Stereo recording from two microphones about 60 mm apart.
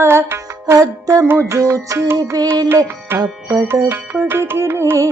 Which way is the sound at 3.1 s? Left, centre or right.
Right.